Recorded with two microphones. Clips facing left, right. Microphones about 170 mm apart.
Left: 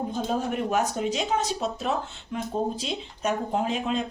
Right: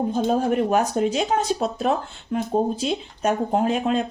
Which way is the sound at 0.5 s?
50° right (ahead or behind).